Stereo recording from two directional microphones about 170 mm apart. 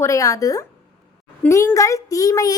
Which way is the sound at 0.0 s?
20° left (ahead or behind).